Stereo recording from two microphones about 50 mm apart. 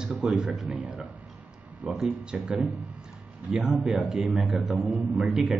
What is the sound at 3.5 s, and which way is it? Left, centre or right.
A man's voice, centre.